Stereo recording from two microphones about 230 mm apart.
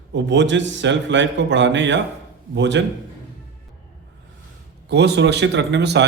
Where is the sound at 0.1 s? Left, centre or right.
Right.